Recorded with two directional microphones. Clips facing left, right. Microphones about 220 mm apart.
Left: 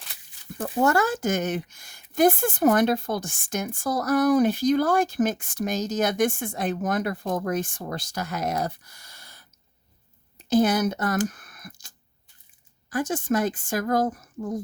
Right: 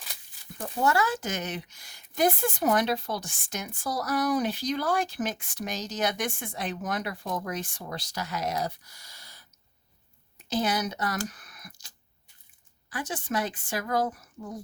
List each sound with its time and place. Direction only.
0.6 s speech: 50° left (ahead or behind)
10.5 s speech: 50° left (ahead or behind)
11.3 s a sound: 50° left (ahead or behind)
12.9 s speech: 45° left (ahead or behind)